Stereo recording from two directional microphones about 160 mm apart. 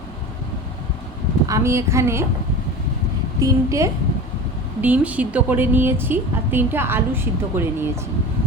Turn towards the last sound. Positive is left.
turn(degrees=-15)  # may be behind; listen again after turning